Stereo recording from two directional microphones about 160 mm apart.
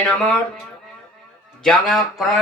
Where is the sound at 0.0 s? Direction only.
5° left (ahead or behind).